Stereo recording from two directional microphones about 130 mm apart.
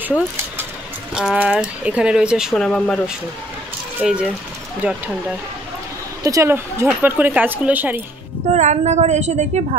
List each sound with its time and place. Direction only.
1.1 s speech: 5° right (ahead or behind)
2.5 s speech: 5° left (ahead or behind)
4.0 s speech: 5° right (ahead or behind)
6.2 s speech: 25° right (ahead or behind)
8.5 s a woman's voice: 60° right (ahead or behind)